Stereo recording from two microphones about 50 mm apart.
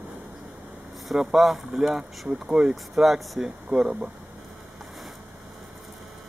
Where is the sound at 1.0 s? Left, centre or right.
Centre.